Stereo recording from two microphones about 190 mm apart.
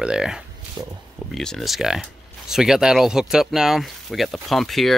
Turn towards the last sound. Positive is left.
turn(degrees=0)  # may be behind; listen again after turning